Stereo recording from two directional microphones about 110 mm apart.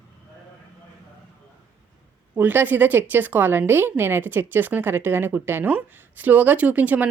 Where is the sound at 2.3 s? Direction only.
15° right (ahead or behind).